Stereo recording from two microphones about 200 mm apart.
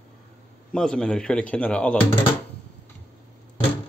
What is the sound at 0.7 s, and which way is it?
A man's voice, 5° left (ahead or behind).